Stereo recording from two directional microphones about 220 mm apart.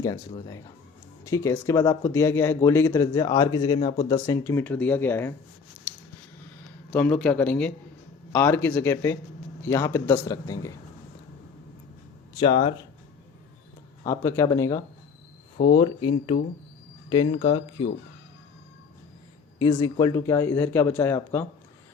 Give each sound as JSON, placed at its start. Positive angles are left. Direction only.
{"t": 0.0, "sound": "speech", "side_deg": 15}
{"t": 6.9, "sound": "speech", "side_deg": 5}
{"t": 12.4, "sound": "speech", "side_deg": 20}
{"t": 14.0, "sound": "speech", "side_deg": 15}
{"t": 15.6, "sound": "speech", "side_deg": 45}
{"t": 17.1, "sound": "speech", "side_deg": 20}
{"t": 19.5, "sound": "speech", "side_deg": 15}